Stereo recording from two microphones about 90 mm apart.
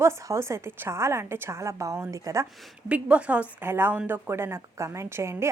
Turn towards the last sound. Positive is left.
turn(degrees=-30)  # may be behind; listen again after turning